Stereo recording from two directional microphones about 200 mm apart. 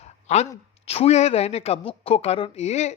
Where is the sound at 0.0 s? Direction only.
35° left (ahead or behind).